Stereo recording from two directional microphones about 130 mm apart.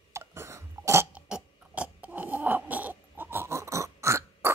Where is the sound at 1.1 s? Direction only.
10° right (ahead or behind).